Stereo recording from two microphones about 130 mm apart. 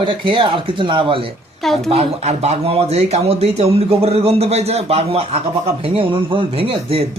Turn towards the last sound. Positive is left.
turn(degrees=-45)  # may be behind; listen again after turning